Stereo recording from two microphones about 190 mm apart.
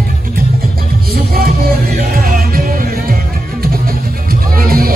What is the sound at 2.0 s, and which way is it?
Music, 50° right (ahead or behind).